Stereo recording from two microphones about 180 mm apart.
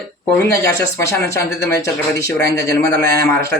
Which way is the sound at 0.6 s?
15° left (ahead or behind).